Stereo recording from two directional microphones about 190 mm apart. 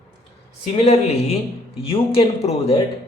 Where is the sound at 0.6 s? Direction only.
35° left (ahead or behind).